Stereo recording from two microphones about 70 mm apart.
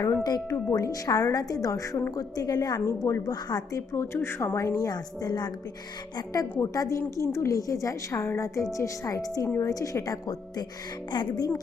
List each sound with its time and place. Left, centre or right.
0.0 s a woman's voice: left
0.5 s a woman's voice: left
3.9 s a woman's voice: left
4.5 s a woman's voice: left
6.1 s a woman's voice: left
11.1 s speech: left